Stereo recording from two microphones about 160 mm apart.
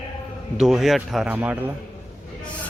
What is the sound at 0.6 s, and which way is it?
Speech, centre (ahead or behind).